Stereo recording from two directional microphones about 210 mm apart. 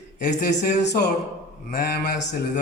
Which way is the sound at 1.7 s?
50° left (ahead or behind).